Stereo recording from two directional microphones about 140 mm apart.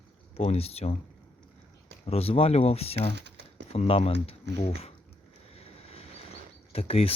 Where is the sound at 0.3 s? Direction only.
45° left (ahead or behind).